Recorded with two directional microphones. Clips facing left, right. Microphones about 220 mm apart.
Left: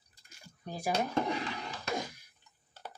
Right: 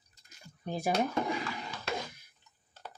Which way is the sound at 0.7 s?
25° right (ahead or behind).